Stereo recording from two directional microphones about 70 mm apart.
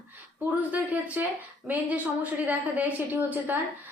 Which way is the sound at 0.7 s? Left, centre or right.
Right.